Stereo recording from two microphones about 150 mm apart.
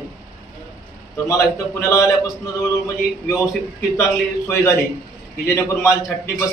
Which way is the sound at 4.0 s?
20° left (ahead or behind).